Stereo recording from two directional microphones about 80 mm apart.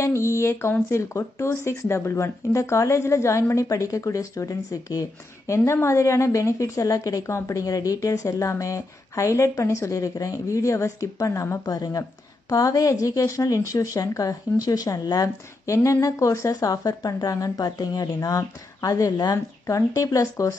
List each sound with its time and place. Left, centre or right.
0.0 s a woman's voice: left